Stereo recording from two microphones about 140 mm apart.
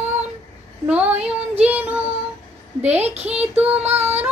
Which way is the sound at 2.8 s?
50° right (ahead or behind).